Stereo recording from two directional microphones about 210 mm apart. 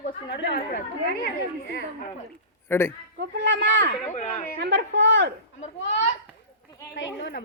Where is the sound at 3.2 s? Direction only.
55° right (ahead or behind).